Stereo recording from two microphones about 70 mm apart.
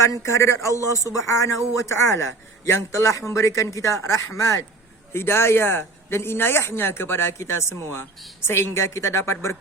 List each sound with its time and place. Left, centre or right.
0.0 s speech: left
5.1 s speech: left